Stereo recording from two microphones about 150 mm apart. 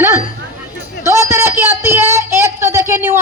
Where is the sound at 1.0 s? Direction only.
20° right (ahead or behind).